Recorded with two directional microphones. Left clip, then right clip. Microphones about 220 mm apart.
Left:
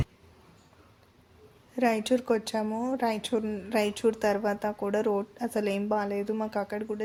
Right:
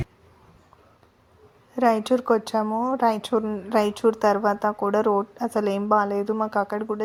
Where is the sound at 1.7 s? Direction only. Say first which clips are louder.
Right 6 dB; 10° right (ahead or behind).